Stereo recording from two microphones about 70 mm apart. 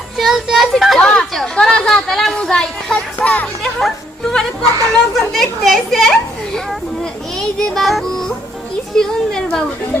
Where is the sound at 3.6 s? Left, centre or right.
Centre.